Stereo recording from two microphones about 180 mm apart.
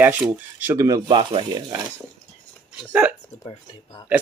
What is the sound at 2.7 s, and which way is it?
Speech, 5° right (ahead or behind).